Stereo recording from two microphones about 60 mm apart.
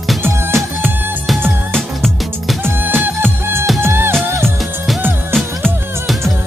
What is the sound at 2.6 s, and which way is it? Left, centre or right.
Music, right.